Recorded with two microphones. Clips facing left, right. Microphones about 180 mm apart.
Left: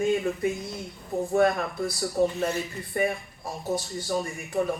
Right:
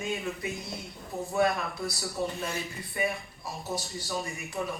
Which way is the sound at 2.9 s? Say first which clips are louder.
Left 5 dB; 50° left (ahead or behind).